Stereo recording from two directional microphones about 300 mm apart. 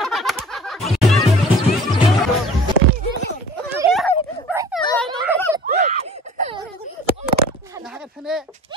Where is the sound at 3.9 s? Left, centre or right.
Centre.